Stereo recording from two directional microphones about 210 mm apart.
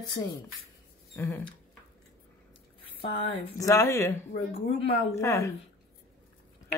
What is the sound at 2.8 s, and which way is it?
Speech, 25° left (ahead or behind).